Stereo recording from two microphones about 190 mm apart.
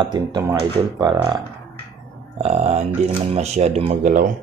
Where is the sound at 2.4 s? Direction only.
35° right (ahead or behind).